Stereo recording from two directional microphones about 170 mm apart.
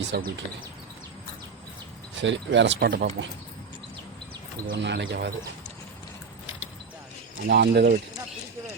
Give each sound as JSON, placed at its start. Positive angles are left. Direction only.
{"t": 0.1, "sound": "speech", "side_deg": -70}
{"t": 2.2, "sound": "speech", "side_deg": -90}
{"t": 4.6, "sound": "speech", "side_deg": -80}
{"t": 7.4, "sound": "speech", "side_deg": -75}